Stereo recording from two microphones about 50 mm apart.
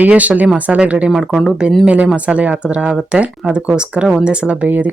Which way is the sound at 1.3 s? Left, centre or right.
Centre.